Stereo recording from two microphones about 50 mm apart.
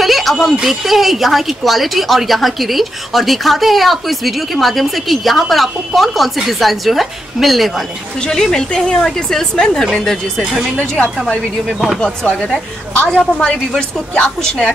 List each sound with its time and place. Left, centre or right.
0.0 s speech: centre
8.3 s a woman's voice: centre
10.4 s speech: centre
12.0 s a woman's voice: centre